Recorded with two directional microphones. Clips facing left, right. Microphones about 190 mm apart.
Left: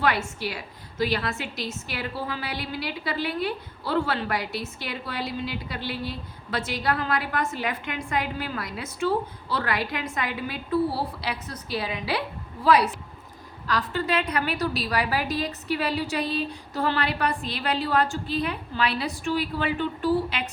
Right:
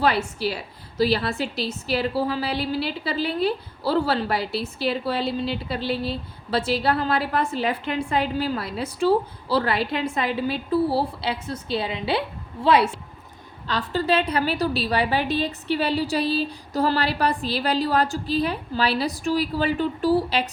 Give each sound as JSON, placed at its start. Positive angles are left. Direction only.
{"t": 0.0, "sound": "a woman's voice", "side_deg": -30}